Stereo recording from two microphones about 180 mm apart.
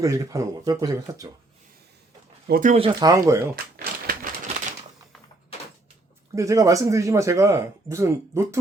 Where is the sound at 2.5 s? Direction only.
50° right (ahead or behind).